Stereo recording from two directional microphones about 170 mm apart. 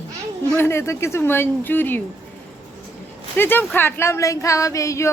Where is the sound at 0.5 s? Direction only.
15° left (ahead or behind).